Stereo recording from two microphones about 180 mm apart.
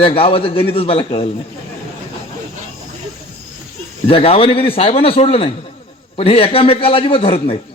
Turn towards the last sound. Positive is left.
turn(degrees=30)  # may be behind; listen again after turning